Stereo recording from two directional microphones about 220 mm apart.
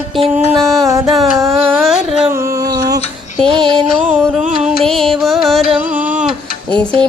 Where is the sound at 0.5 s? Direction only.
Centre (ahead or behind).